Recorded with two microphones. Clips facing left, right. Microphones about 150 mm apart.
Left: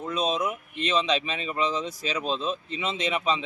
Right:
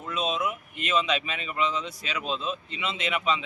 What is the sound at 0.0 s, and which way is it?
A man's voice, 40° left (ahead or behind).